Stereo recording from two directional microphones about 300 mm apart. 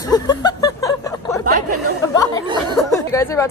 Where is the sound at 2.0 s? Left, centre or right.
Centre.